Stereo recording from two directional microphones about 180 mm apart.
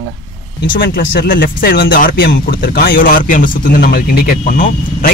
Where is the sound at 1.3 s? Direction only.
55° left (ahead or behind).